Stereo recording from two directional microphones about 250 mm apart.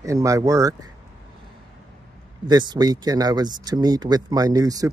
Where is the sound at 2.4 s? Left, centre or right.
Centre.